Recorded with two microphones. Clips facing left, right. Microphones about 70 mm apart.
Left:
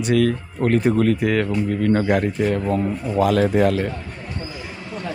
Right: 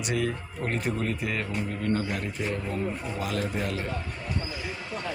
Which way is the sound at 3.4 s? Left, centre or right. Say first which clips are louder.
Left 13 dB; left.